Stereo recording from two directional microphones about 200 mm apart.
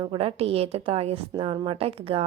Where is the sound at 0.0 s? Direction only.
25° right (ahead or behind).